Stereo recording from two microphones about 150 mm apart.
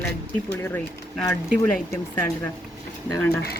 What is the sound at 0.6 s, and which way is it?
Speech, 15° left (ahead or behind).